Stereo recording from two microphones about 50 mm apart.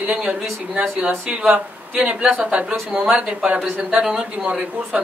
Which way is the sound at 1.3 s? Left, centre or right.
Right.